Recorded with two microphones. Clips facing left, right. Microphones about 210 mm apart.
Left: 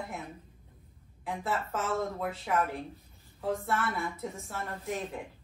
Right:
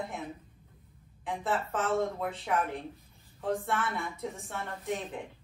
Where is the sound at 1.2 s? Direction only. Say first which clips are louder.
Right 1 dB; centre (ahead or behind).